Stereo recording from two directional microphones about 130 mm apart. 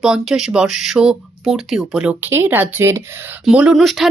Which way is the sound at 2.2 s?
15° right (ahead or behind).